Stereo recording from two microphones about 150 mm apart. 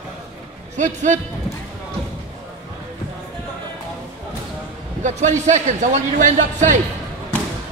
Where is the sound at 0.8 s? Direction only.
55° right (ahead or behind).